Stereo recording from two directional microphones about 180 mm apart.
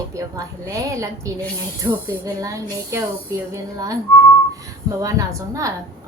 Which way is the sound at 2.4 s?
15° right (ahead or behind).